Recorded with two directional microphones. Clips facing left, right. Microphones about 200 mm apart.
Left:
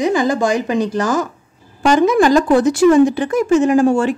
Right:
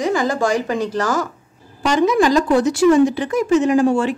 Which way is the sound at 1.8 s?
50° left (ahead or behind).